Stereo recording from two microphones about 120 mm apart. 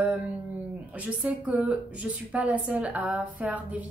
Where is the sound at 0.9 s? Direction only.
10° right (ahead or behind).